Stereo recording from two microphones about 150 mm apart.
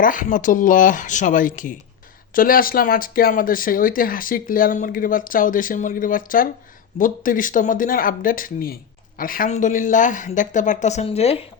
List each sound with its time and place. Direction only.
0.0 s speech: 65° left (ahead or behind); by 11.4 s 45° left (ahead or behind)